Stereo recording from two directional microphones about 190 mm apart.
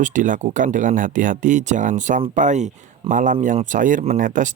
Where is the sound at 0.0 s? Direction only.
45° right (ahead or behind).